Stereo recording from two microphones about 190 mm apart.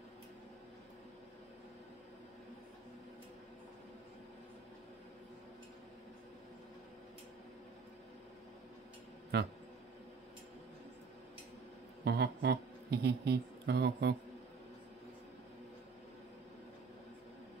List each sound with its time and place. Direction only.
9.3 s speech: 60° right (ahead or behind)
12.0 s a man's voice: 60° right (ahead or behind)